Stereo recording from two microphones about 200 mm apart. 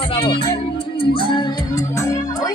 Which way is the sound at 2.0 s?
15° left (ahead or behind).